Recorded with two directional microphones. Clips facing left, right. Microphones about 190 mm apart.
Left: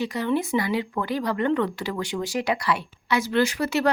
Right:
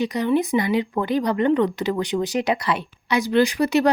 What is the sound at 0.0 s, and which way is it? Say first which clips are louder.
Speech: right 4 dB; 20° right (ahead or behind).